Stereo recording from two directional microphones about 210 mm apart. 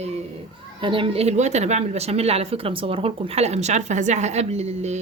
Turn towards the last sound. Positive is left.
turn(degrees=-30)  # may be behind; listen again after turning